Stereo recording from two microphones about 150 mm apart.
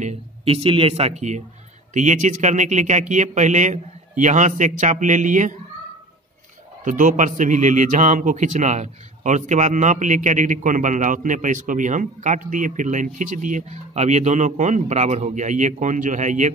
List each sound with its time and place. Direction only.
0.0 s a man's voice: 45° right (ahead or behind)
6.8 s a man's voice: 60° right (ahead or behind)